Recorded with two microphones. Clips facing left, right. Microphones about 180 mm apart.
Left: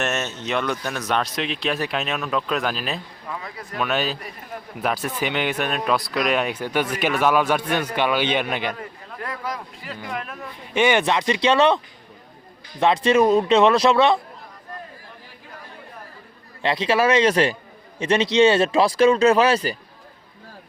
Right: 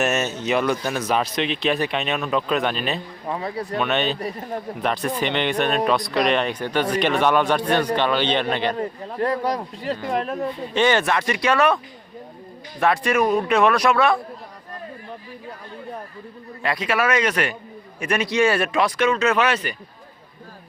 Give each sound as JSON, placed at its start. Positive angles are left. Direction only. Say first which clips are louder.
{"t": 0.0, "sound": "speech", "louder": "right 4 dB", "side_deg": -5}
{"t": 3.2, "sound": "speech", "louder": "right 9 dB", "side_deg": -35}
{"t": 3.8, "sound": "speech", "louder": "right 1 dB", "side_deg": 0}
{"t": 4.2, "sound": "speech", "louder": "right 8 dB", "side_deg": -35}
{"t": 4.8, "sound": "speech", "louder": "even", "side_deg": 5}
{"t": 8.7, "sound": "speech", "louder": "right 8 dB", "side_deg": -35}
{"t": 10.8, "sound": "speech", "louder": "left 1 dB", "side_deg": 15}
{"t": 12.8, "sound": "speech", "louder": "left 3 dB", "side_deg": 20}
{"t": 16.6, "sound": "speech", "louder": "left 3 dB", "side_deg": 25}